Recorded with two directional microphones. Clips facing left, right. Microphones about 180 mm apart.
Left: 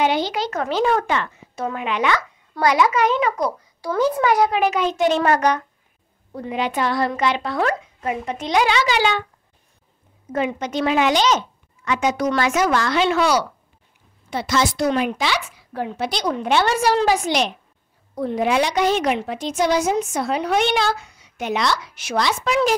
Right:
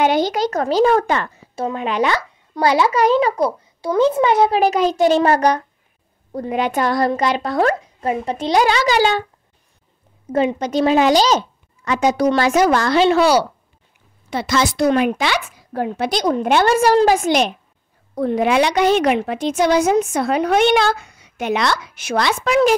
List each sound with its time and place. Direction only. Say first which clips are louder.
0.0 s speech: right 4 dB; 45° right (ahead or behind)
6.3 s speech: right 4 dB; 45° right (ahead or behind)
10.3 s speech: right 5 dB; 35° right (ahead or behind)
14.3 s a woman's voice: right 2 dB; 85° right; by 17.5 s 50° right (ahead or behind)
18.1 s a woman's voice: right 3 dB; 65° right (ahead or behind)